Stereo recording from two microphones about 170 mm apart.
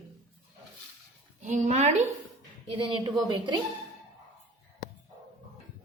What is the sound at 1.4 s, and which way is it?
Speech, 45° right (ahead or behind).